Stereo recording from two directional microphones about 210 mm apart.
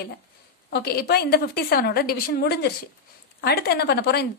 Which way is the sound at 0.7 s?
50° left (ahead or behind).